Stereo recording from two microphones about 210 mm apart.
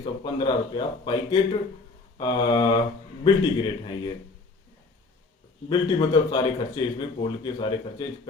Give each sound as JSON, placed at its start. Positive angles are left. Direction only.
{"t": 0.0, "sound": "speech", "side_deg": 25}
{"t": 5.6, "sound": "speech", "side_deg": 20}